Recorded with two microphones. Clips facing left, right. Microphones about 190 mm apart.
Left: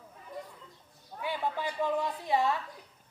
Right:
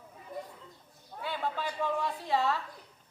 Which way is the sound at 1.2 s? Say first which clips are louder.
Left 1 dB; 15° left (ahead or behind).